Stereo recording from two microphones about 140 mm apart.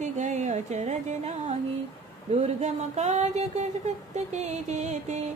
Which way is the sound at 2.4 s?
55° right (ahead or behind).